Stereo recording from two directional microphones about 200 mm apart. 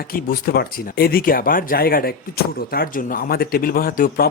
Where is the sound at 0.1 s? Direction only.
50° left (ahead or behind).